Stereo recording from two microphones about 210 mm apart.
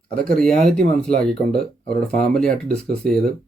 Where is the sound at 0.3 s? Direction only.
Centre (ahead or behind).